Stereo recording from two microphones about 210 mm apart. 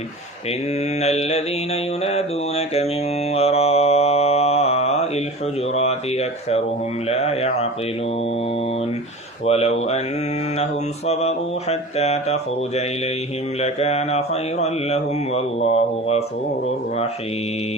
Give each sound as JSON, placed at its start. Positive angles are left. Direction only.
{"t": 0.9, "sound": "mantra", "side_deg": 30}
{"t": 9.5, "sound": "mantra", "side_deg": 30}